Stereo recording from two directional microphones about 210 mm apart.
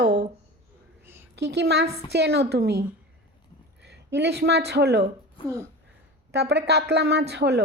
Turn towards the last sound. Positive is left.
turn(degrees=-55)  # may be behind; listen again after turning